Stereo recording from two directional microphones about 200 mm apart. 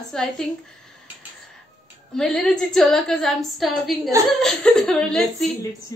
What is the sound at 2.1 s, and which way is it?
A woman's voice, 5° left (ahead or behind).